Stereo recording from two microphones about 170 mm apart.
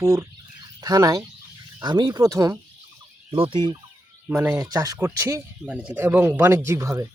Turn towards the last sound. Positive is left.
turn(degrees=-15)  # may be behind; listen again after turning